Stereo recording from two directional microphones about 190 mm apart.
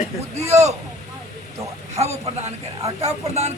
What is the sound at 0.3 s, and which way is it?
Speech, 35° right (ahead or behind).